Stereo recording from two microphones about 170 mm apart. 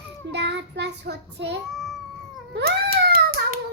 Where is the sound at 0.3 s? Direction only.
90° right.